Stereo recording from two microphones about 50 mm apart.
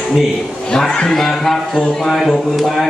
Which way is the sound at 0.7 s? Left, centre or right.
Centre.